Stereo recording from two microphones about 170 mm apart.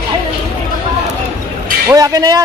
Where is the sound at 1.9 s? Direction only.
20° right (ahead or behind).